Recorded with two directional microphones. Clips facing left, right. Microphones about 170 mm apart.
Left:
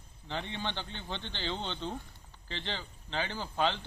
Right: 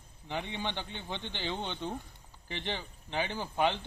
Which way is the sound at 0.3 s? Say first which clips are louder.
Right 1 dB; 15° right (ahead or behind).